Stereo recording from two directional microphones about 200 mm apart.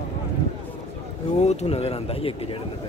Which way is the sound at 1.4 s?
35° left (ahead or behind).